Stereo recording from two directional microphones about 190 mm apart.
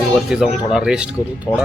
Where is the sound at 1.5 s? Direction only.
25° left (ahead or behind).